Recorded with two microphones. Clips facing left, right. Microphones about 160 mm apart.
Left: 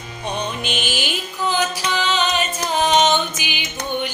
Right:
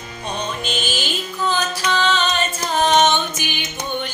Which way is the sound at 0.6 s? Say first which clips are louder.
Even; 15° left (ahead or behind).